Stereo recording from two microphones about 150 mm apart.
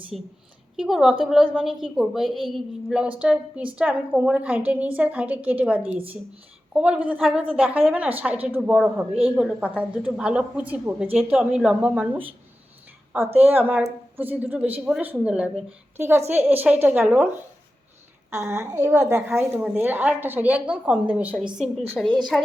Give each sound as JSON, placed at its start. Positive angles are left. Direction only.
{"t": 0.8, "sound": "a woman's voice", "side_deg": 0}
{"t": 13.4, "sound": "a woman's voice", "side_deg": -10}
{"t": 18.5, "sound": "a woman's voice", "side_deg": -20}